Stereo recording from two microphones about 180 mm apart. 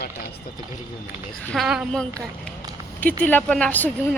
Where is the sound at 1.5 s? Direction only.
Centre (ahead or behind).